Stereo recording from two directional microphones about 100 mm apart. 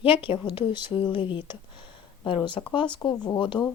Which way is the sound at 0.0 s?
60° left (ahead or behind).